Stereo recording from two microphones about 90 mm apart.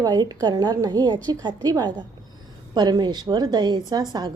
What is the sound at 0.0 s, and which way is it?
A woman's voice, 50° right (ahead or behind).